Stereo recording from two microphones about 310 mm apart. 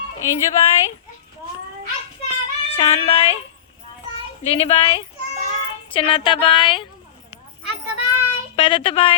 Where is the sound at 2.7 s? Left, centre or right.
Centre.